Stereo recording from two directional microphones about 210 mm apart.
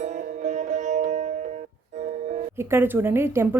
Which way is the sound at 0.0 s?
35° right (ahead or behind).